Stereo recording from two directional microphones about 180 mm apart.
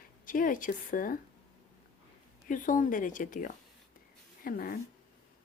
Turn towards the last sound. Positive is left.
turn(degrees=55)  # may be behind; listen again after turning